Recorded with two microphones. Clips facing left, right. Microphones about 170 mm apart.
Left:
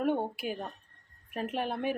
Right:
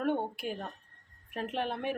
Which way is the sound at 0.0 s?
5° left (ahead or behind).